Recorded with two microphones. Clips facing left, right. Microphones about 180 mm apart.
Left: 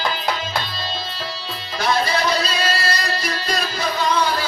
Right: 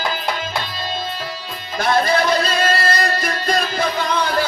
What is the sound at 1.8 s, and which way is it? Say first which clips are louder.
Music: right 3 dB; 50° right (ahead or behind).